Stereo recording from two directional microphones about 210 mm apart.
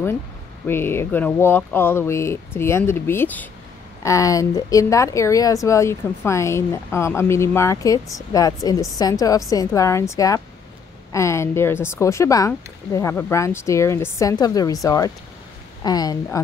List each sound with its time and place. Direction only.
0.7 s speech: 10° left (ahead or behind)